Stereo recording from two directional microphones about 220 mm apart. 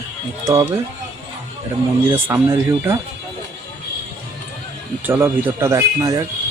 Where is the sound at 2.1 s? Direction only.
10° right (ahead or behind).